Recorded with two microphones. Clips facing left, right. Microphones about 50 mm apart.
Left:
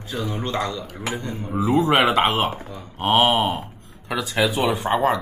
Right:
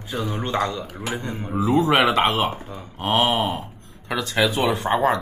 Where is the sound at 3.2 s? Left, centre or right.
Left.